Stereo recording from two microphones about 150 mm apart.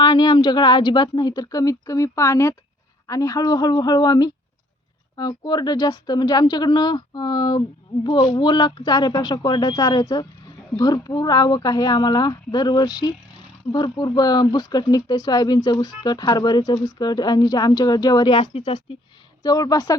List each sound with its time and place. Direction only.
0.0 s speech: 30° left (ahead or behind)
19.4 s speech: 25° left (ahead or behind)